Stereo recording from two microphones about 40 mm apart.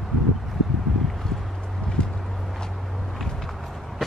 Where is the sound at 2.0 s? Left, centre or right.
Left.